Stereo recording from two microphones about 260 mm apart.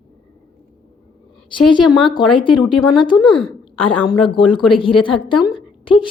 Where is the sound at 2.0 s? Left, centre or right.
Centre.